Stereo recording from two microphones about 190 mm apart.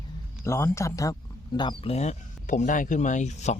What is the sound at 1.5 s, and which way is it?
Speech, 25° left (ahead or behind).